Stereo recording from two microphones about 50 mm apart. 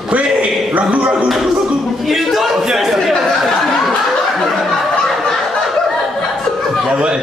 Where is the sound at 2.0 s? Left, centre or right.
Centre.